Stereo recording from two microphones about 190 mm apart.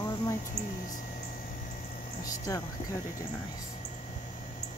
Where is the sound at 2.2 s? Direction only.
15° left (ahead or behind).